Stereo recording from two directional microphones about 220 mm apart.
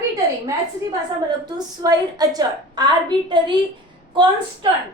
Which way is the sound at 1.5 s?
15° right (ahead or behind).